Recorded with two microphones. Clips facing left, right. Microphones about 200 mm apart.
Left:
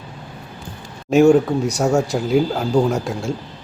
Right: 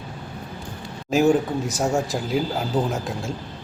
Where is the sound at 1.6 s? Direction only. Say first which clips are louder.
Left 5 dB; centre (ahead or behind).